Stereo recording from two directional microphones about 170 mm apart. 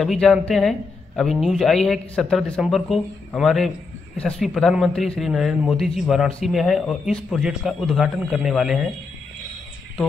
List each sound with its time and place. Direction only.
0.0 s a man's voice: centre (ahead or behind)